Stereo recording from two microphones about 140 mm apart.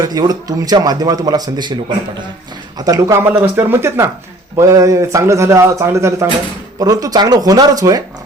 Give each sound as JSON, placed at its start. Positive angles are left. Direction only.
{"t": 0.0, "sound": "a man's voice", "side_deg": -25}